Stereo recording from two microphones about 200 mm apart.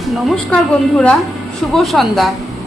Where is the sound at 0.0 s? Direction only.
Centre (ahead or behind).